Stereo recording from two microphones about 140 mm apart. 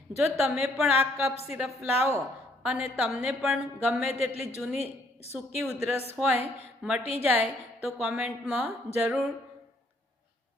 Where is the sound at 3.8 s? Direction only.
10° right (ahead or behind).